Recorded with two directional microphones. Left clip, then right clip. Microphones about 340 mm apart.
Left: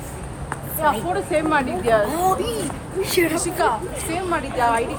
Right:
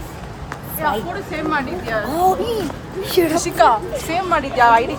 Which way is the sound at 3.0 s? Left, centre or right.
Centre.